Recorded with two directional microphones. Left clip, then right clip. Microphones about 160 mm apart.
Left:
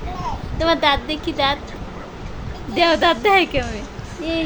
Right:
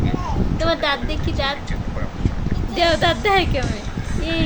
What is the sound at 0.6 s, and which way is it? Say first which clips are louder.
A woman's voice: left 4 dB; 25° left (ahead or behind).